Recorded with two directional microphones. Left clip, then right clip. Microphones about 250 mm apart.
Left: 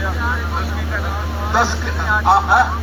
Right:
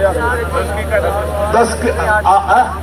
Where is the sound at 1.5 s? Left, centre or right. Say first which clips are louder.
Right 4 dB; right.